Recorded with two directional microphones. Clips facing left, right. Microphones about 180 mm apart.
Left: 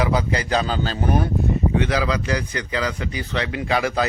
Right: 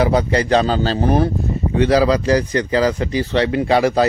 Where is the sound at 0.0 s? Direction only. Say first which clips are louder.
Right 6 dB; 35° right (ahead or behind).